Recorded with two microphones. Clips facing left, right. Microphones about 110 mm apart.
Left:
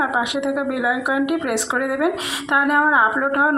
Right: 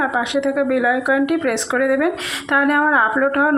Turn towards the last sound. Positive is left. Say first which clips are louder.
# right 2 dB
turn(degrees=20)  # may be behind; listen again after turning